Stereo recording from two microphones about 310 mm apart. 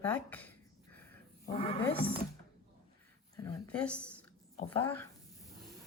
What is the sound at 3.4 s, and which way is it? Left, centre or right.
Speech, centre.